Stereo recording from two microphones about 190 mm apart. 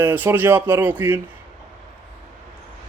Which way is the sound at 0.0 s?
10° right (ahead or behind).